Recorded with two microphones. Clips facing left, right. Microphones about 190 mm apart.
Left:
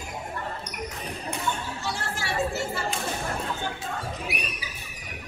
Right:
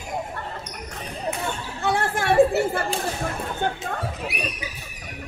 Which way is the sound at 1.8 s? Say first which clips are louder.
Right 12 dB; 55° right (ahead or behind).